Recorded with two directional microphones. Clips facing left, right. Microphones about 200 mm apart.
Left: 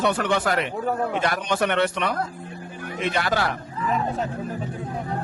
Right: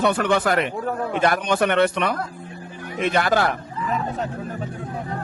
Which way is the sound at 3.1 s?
50° right (ahead or behind).